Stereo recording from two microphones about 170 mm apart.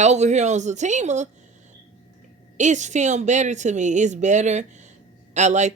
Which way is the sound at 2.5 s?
45° right (ahead or behind).